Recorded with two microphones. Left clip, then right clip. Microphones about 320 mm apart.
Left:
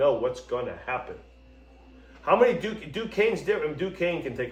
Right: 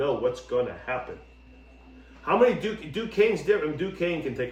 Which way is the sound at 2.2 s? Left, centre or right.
Centre.